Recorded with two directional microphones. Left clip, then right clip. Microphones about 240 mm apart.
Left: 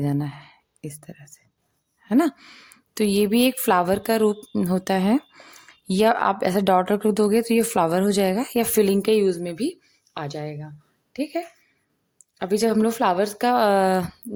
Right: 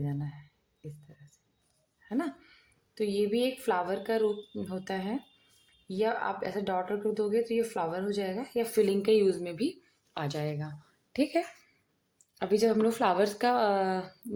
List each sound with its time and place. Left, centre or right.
0.0 s a woman's voice: left
10.2 s a woman's voice: centre
12.4 s speech: left